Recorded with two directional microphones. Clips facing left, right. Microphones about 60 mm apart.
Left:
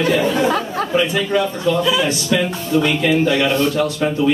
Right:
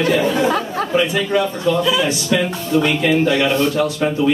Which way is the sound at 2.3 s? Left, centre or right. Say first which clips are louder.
Even; right.